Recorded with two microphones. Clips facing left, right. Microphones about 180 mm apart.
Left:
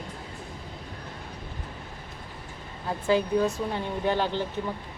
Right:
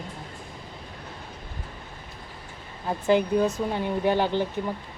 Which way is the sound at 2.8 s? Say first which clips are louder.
Right 3 dB; 20° right (ahead or behind).